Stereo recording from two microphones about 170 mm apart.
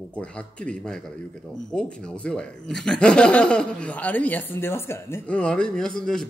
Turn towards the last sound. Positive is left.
turn(degrees=5)  # may be behind; listen again after turning